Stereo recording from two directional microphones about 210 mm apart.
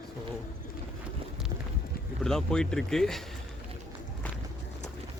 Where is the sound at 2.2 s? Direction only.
Centre (ahead or behind).